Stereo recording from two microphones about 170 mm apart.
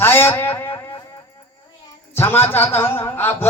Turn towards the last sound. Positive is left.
turn(degrees=10)  # may be behind; listen again after turning